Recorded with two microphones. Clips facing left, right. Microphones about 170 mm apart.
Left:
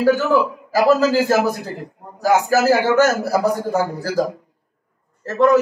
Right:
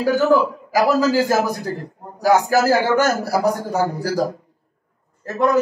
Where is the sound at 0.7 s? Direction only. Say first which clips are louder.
Left 2 dB; 15° right (ahead or behind).